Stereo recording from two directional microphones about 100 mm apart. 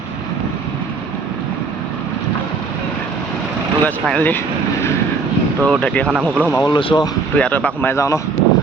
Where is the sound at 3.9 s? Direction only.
15° left (ahead or behind).